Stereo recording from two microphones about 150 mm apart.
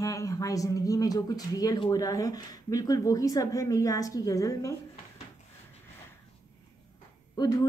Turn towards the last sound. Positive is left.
turn(degrees=25)  # may be behind; listen again after turning